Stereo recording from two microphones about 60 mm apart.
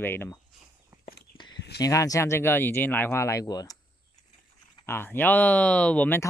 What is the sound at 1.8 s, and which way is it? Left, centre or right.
Speech, left.